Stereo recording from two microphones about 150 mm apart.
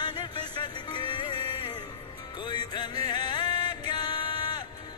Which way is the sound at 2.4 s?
30° left (ahead or behind).